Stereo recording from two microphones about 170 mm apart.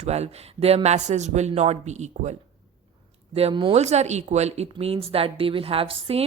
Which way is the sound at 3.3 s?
30° right (ahead or behind).